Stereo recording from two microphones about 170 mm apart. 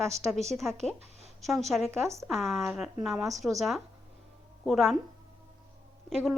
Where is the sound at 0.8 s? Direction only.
40° right (ahead or behind).